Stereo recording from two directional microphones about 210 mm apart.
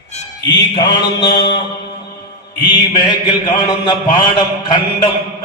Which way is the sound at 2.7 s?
20° left (ahead or behind).